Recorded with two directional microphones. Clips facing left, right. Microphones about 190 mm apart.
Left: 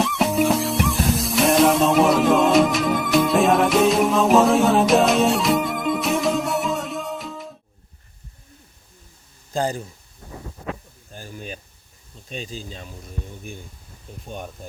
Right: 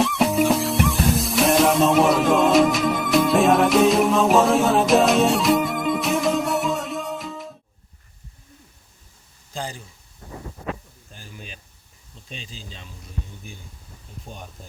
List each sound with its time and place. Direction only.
0.0 s music: centre (ahead or behind)
9.5 s speech: 45° left (ahead or behind)
11.1 s a sound: 45° left (ahead or behind)
12.3 s speech: 45° left (ahead or behind)